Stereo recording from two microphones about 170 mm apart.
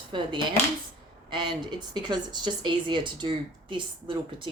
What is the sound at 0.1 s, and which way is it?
Speech, 25° right (ahead or behind).